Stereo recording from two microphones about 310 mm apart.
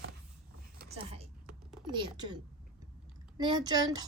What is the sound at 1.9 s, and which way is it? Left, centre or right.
Speech, centre.